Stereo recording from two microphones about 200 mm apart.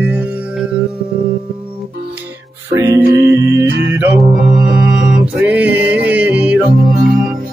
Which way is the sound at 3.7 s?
65° right (ahead or behind).